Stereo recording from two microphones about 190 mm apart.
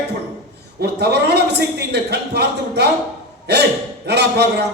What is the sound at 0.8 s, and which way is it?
A man's voice, 60° right (ahead or behind).